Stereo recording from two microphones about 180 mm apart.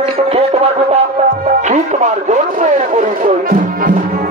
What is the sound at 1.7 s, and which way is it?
Speech, 40° right (ahead or behind).